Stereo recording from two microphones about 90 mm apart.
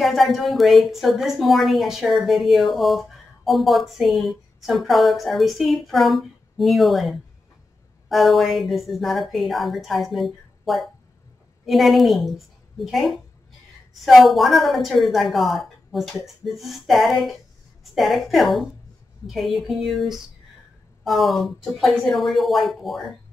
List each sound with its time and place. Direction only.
0.0 s a woman's voice: centre (ahead or behind)